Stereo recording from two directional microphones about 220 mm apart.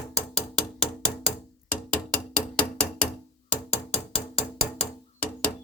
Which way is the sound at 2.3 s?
5° left (ahead or behind).